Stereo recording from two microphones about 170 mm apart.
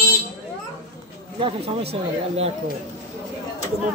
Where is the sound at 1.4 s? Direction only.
35° right (ahead or behind).